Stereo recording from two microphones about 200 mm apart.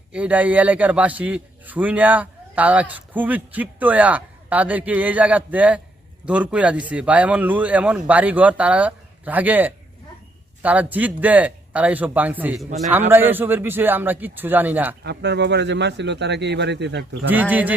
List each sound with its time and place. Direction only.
0.1 s a man's voice: 5° right (ahead or behind)
15.0 s speech: 55° right (ahead or behind)
17.3 s a man's voice: 10° right (ahead or behind)